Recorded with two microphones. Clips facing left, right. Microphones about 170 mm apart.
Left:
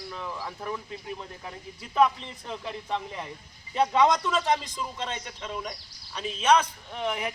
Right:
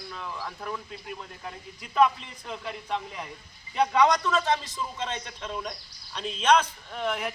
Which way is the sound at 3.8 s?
20° left (ahead or behind).